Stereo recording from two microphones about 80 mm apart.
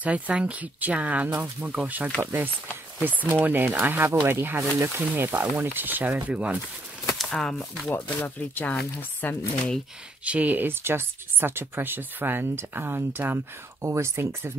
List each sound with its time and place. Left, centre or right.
0.0 s speech: centre
7.2 s speech: centre
7.9 s speech: left
10.2 s speech: centre; by 14.5 s right